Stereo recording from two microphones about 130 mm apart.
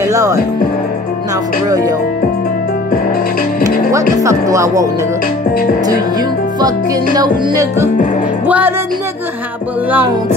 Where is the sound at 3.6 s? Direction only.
25° right (ahead or behind).